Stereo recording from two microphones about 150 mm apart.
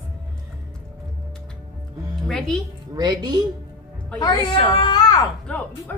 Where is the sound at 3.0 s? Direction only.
25° right (ahead or behind).